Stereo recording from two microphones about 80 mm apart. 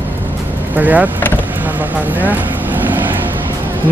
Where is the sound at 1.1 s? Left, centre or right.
Left.